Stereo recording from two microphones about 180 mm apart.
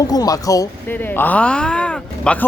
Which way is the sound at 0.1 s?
20° left (ahead or behind).